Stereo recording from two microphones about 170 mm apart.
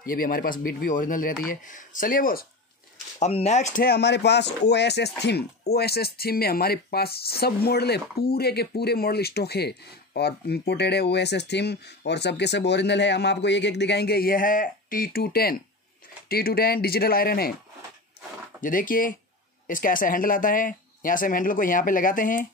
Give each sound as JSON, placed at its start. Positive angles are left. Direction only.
{"t": 0.0, "sound": "speech", "side_deg": 55}
{"t": 3.2, "sound": "speech", "side_deg": 40}
{"t": 3.8, "sound": "speech", "side_deg": 75}
{"t": 18.6, "sound": "speech", "side_deg": 55}